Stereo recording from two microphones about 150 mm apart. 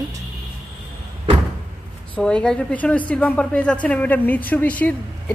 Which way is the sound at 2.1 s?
5° left (ahead or behind).